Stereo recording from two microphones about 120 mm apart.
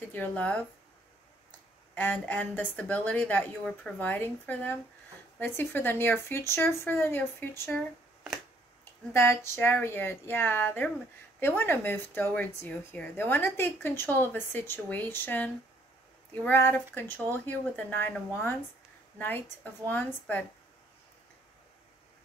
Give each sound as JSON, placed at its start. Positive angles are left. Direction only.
{"t": 0.1, "sound": "speech", "side_deg": 10}
{"t": 2.0, "sound": "speech", "side_deg": 15}
{"t": 9.1, "sound": "a woman's voice", "side_deg": 20}